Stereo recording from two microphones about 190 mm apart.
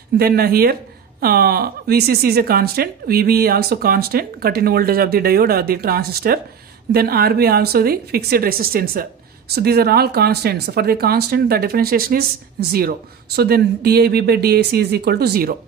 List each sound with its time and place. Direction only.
0.2 s speech: 55° right (ahead or behind)